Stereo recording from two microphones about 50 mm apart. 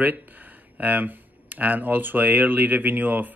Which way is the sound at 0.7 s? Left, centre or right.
Right.